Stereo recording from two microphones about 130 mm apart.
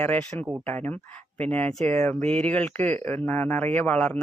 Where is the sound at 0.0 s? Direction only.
10° left (ahead or behind).